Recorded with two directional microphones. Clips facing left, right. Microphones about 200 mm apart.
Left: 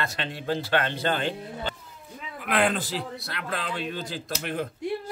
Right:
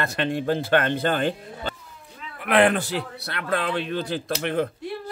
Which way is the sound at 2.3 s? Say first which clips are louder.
Right 6 dB; 65° right (ahead or behind).